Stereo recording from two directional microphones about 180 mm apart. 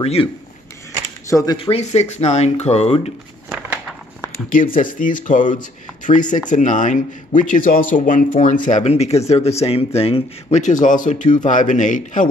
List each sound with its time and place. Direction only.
0.0 s speech: 35° left (ahead or behind)
1.3 s speech: 20° left (ahead or behind)
3.4 s a sound: 5° right (ahead or behind)
4.5 s speech: 50° left (ahead or behind)